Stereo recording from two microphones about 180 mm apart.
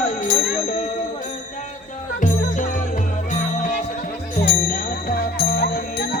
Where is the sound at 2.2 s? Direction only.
45° left (ahead or behind).